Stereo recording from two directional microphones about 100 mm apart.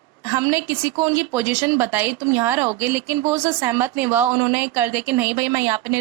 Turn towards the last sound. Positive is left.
turn(degrees=-25)  # may be behind; listen again after turning